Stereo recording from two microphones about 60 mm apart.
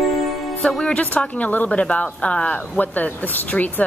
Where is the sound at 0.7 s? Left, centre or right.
Centre.